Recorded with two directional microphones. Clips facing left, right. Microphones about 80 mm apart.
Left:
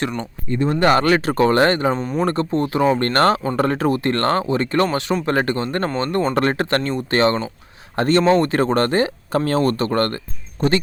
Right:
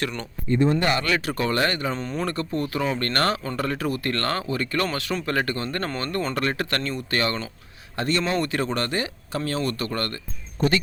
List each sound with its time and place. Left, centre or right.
0.7 s speech: left
2.0 s speech: centre
2.2 s speech: left
7.9 s speech: left